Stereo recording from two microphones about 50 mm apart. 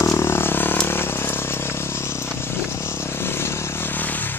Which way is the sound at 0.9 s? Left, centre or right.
Left.